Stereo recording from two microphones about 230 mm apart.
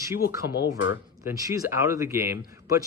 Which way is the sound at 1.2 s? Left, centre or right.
Centre.